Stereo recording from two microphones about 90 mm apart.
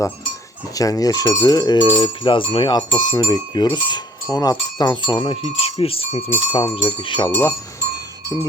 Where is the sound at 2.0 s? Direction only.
60° left (ahead or behind); by 6.2 s 90° left.